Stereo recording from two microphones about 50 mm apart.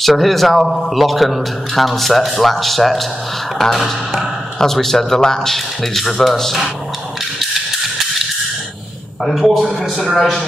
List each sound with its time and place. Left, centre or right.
0.0 s a man's voice: centre
9.2 s a man's voice: centre